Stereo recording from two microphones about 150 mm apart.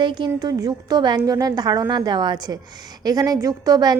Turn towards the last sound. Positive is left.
turn(degrees=-25)  # may be behind; listen again after turning